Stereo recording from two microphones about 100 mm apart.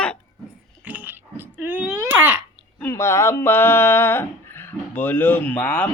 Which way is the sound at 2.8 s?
30° left (ahead or behind).